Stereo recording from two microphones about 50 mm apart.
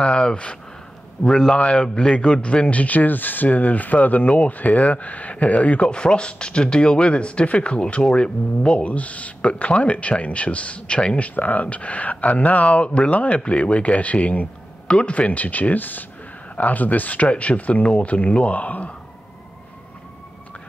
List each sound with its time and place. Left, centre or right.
0.0 s a man's voice: centre
14.9 s speech: left